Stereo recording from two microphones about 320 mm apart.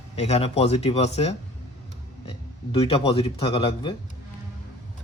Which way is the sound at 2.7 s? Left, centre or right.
Centre.